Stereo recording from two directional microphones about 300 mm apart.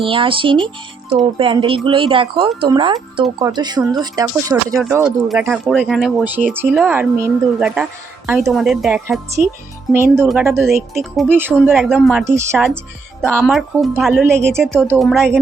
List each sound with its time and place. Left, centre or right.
0.0 s speech: centre